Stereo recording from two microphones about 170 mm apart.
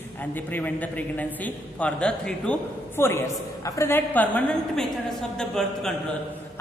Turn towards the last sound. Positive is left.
turn(degrees=5)  # may be behind; listen again after turning